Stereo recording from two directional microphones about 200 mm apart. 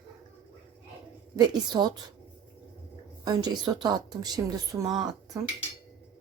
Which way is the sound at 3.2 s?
20° right (ahead or behind).